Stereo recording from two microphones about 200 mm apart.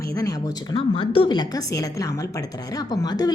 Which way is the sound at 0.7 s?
25° left (ahead or behind).